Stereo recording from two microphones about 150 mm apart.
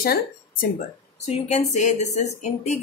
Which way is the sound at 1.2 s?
45° left (ahead or behind).